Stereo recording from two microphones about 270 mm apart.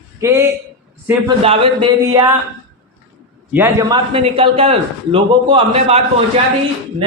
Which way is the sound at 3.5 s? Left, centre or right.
Centre.